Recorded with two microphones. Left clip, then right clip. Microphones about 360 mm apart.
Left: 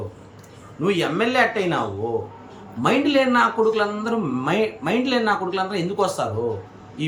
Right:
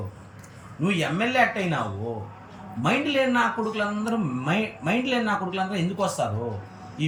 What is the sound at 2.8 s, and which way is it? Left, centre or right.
Speech, centre.